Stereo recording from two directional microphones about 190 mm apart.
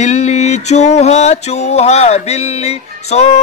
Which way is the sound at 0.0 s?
35° left (ahead or behind).